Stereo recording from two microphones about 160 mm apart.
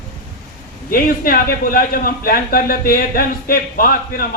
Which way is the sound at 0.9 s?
60° left (ahead or behind).